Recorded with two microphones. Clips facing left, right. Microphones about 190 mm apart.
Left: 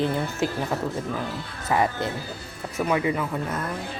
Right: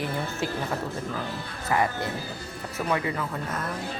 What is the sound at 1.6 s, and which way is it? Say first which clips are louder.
Speech: left 2 dB; 20° left (ahead or behind).